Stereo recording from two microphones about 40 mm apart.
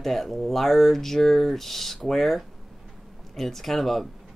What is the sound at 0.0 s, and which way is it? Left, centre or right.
Speech, centre.